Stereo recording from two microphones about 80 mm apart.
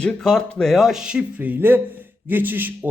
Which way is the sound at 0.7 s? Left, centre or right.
Centre.